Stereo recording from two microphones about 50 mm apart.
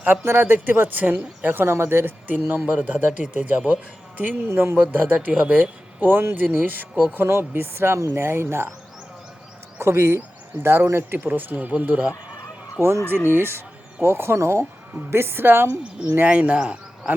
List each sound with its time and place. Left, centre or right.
0.1 s speech: right
1.6 s speech: right
2.2 s a man's voice: right
4.4 s speech: right
4.8 s a man's voice: right
6.0 s a man's voice: right
7.2 s speech: right
9.7 s speech: right
11.3 s a man's voice: right
11.7 s speech: right
12.8 s speech: right
15.1 s speech: right
16.0 s speech: centre